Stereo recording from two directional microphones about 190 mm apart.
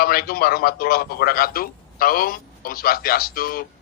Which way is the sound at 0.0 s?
50° left (ahead or behind).